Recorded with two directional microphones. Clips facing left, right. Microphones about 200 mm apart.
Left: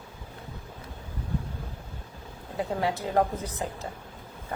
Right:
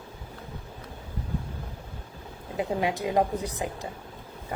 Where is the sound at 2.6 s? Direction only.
15° right (ahead or behind).